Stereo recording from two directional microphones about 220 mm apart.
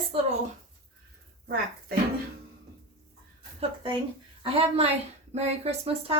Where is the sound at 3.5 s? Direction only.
20° right (ahead or behind).